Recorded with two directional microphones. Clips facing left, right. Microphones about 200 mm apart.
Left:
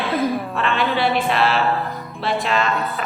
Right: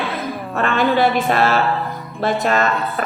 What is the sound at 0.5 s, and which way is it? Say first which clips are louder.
A woman's voice: right 4 dB; 45° right (ahead or behind).